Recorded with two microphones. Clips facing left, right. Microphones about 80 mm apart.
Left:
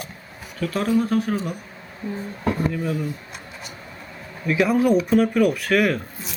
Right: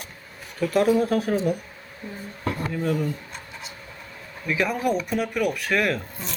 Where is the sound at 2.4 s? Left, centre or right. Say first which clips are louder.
Left 5 dB; centre.